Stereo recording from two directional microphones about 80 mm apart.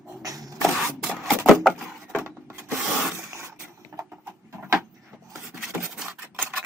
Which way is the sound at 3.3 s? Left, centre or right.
Right.